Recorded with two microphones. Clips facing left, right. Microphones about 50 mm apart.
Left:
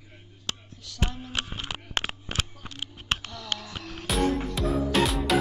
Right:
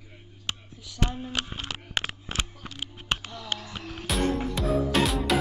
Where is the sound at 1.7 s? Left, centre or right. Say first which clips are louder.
Left 1 dB; centre.